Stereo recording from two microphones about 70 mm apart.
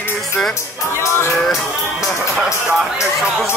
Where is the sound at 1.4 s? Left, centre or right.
Centre.